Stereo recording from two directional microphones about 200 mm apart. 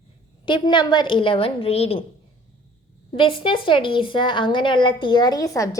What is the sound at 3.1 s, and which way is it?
A woman's voice, 25° left (ahead or behind).